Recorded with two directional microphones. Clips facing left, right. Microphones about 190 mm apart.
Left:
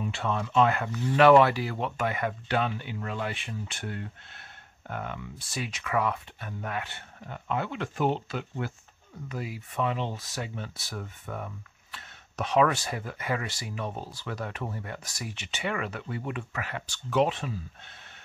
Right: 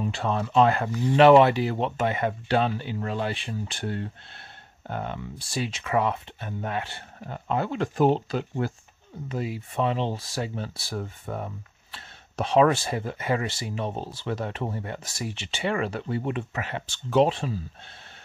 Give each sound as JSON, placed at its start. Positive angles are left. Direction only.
{"t": 0.0, "sound": "speech", "side_deg": -35}
{"t": 9.3, "sound": "speech", "side_deg": -25}